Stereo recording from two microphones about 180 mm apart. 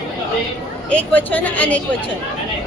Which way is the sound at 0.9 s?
10° left (ahead or behind).